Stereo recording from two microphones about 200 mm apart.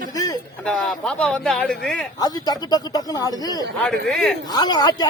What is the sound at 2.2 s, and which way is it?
Speech, 20° left (ahead or behind).